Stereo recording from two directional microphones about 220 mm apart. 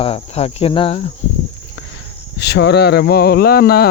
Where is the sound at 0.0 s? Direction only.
25° left (ahead or behind).